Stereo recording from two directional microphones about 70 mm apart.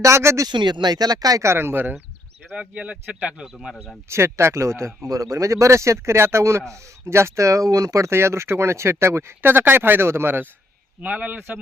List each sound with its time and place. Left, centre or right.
0.0 s speech: right
0.4 s speech: right
1.4 s speech: right
2.6 s speech: centre
3.5 s speech: centre
4.1 s speech: right
11.0 s speech: right